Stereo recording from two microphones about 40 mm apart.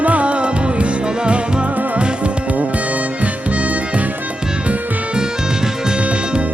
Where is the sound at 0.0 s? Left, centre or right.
Right.